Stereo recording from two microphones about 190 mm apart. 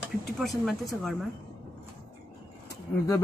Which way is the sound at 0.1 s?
Centre (ahead or behind).